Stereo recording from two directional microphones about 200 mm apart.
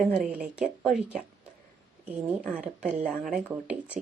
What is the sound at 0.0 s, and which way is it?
Speech, 5° right (ahead or behind).